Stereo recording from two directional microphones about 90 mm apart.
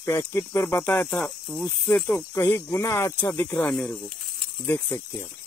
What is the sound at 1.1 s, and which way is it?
Speech, 20° left (ahead or behind).